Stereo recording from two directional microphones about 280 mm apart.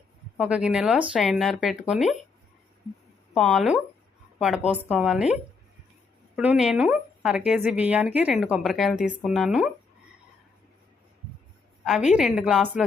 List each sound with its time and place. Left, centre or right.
0.3 s a woman's voice: centre
3.3 s a woman's voice: centre
11.9 s a woman's voice: centre